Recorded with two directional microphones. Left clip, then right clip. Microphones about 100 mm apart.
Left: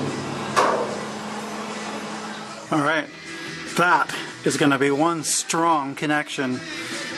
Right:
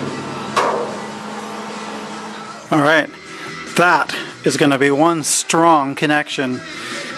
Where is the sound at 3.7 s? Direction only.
15° right (ahead or behind).